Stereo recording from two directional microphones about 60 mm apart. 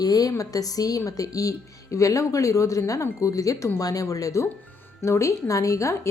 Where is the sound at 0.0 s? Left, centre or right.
Left.